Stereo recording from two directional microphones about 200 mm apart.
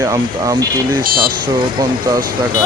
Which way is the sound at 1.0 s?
45° right (ahead or behind).